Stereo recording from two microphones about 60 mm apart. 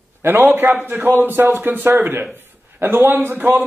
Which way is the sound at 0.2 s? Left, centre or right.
Right.